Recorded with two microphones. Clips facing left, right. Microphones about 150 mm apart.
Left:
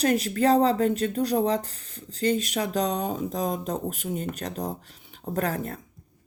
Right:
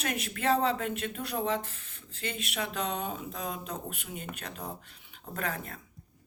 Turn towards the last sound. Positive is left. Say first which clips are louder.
# left 8 dB
turn(degrees=40)  # may be behind; listen again after turning